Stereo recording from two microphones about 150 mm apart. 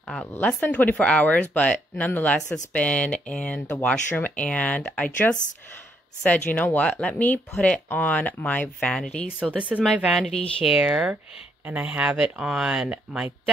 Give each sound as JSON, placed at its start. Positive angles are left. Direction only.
{"t": 0.0, "sound": "speech", "side_deg": 10}
{"t": 6.5, "sound": "speech", "side_deg": 10}
{"t": 9.4, "sound": "speech", "side_deg": -10}